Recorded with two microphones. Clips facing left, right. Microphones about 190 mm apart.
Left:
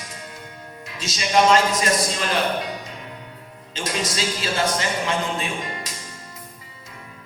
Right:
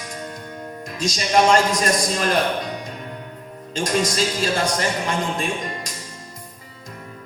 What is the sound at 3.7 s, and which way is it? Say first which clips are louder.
A man's voice: right 5 dB; 45° right (ahead or behind).